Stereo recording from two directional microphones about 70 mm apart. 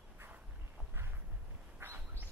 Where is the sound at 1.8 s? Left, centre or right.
Right.